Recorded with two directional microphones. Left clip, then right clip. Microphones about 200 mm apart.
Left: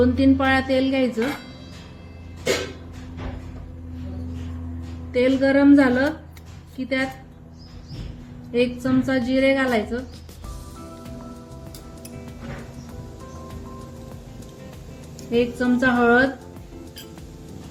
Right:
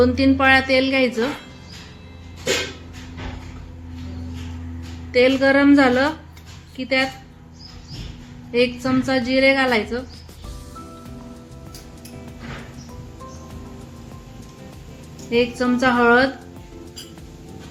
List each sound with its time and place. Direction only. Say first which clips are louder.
0.0 s a woman's voice: right 3 dB; 35° right (ahead or behind)
5.1 s a woman's voice: right 3 dB; 40° right (ahead or behind)
8.5 s a woman's voice: right 2 dB; 40° right (ahead or behind)
15.3 s a woman's voice: right 2 dB; 40° right (ahead or behind)